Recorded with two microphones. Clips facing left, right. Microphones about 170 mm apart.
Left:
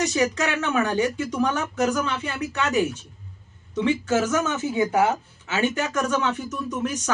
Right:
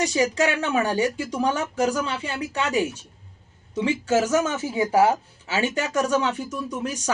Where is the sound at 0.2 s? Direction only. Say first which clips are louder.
Right 2 dB; 30° right (ahead or behind).